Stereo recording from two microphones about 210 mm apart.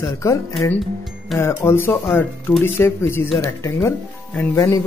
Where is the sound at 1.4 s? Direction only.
10° left (ahead or behind).